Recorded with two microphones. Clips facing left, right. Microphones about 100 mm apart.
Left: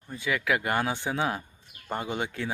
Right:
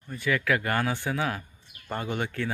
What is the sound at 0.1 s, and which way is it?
Speech, 15° left (ahead or behind).